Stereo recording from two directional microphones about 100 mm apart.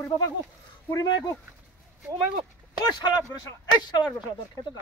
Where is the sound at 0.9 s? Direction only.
40° left (ahead or behind).